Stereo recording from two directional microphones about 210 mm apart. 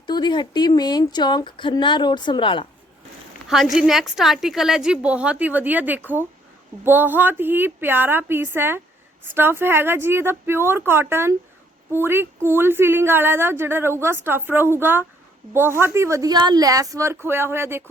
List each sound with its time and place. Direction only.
0.1 s a woman's voice: 20° left (ahead or behind)
3.5 s a woman's voice: centre (ahead or behind)